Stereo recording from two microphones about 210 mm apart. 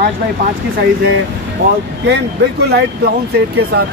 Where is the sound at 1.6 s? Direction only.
55° right (ahead or behind).